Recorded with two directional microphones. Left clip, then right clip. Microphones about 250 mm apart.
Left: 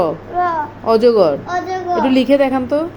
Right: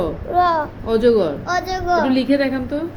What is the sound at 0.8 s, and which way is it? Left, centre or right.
A woman's voice, centre.